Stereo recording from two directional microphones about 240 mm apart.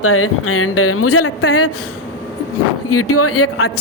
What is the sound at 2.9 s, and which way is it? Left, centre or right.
Speech, left.